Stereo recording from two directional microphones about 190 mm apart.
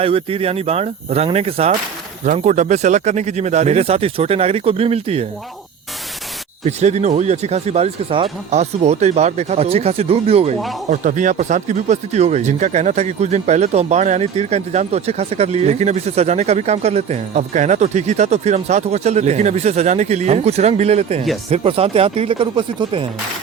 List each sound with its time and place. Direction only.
0.0 s speech: 30° right (ahead or behind)
6.7 s speech: 35° right (ahead or behind)